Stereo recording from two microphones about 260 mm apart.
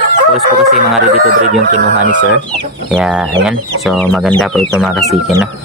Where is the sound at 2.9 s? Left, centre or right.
Centre.